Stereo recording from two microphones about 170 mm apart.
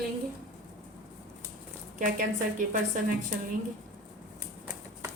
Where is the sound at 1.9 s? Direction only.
50° right (ahead or behind).